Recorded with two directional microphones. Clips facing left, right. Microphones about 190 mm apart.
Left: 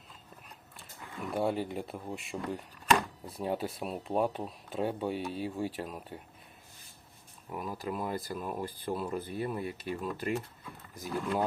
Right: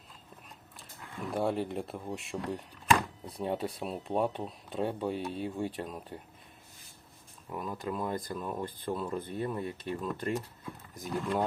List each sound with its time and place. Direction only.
0.8 s speech: centre (ahead or behind)
7.5 s speech: 5° left (ahead or behind)